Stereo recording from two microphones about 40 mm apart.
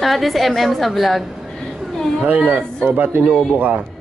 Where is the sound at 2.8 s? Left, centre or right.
Right.